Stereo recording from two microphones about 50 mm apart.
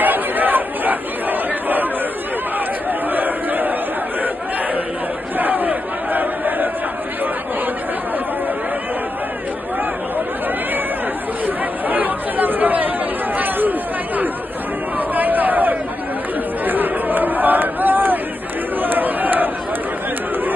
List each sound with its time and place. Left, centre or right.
0.0 s crowd: right
2.9 s chatter: right
5.4 s crowd: right
11.4 s chatter: right
15.0 s a sound: right
16.6 s chatter: right